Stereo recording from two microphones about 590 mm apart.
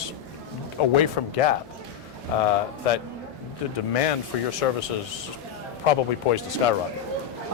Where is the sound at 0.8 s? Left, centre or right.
Left.